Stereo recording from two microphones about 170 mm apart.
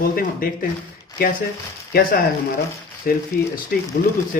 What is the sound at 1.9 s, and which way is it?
Speech, 60° left (ahead or behind).